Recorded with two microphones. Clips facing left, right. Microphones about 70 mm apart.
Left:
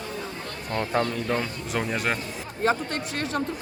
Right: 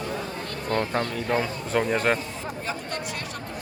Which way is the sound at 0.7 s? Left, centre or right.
Right.